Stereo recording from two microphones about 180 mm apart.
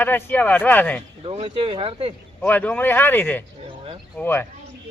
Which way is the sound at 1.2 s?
30° right (ahead or behind).